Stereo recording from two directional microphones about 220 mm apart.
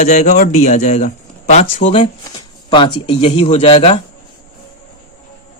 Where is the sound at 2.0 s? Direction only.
20° left (ahead or behind).